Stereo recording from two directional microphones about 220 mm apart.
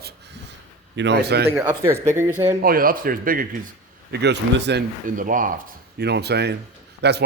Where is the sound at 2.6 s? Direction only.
40° right (ahead or behind).